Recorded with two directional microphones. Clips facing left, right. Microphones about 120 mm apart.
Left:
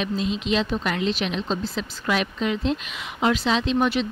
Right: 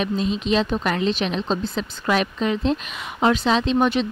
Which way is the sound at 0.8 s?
40° right (ahead or behind).